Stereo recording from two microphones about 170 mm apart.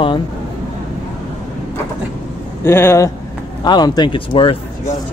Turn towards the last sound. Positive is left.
turn(degrees=30)  # may be behind; listen again after turning